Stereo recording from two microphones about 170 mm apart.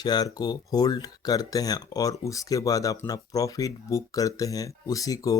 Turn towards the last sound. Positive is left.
turn(degrees=20)  # may be behind; listen again after turning